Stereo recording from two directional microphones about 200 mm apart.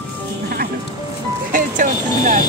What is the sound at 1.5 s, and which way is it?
Speech, 40° right (ahead or behind).